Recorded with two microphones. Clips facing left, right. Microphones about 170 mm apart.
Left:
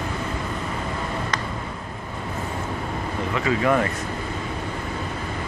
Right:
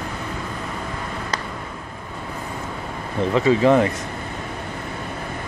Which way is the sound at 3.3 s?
30° right (ahead or behind).